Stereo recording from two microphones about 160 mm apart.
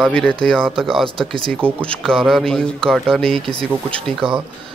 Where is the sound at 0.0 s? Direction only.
5° left (ahead or behind).